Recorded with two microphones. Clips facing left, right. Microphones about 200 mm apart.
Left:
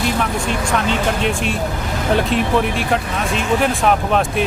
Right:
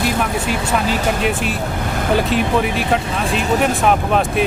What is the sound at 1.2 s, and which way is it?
Speech, 5° right (ahead or behind).